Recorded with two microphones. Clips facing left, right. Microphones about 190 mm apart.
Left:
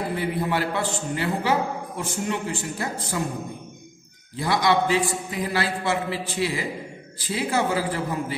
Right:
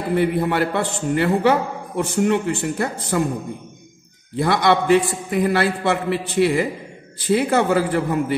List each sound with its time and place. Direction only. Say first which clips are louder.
0.1 s a man's voice: right 11 dB; 60° right (ahead or behind)
4.4 s a man's voice: right 4 dB; 60° right (ahead or behind)